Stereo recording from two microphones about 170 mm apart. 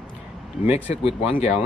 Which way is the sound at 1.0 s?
35° left (ahead or behind).